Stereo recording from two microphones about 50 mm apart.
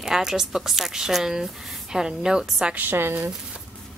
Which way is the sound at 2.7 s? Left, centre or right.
Right.